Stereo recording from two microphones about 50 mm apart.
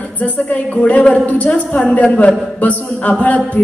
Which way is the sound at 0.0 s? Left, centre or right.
Left.